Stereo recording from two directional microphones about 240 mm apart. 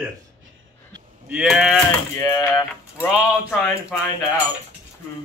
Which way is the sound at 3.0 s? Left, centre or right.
Centre.